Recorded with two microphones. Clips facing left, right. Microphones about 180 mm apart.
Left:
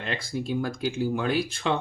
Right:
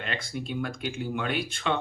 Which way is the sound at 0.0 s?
35° left (ahead or behind).